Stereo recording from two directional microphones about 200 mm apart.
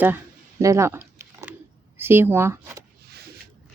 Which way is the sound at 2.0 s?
10° right (ahead or behind).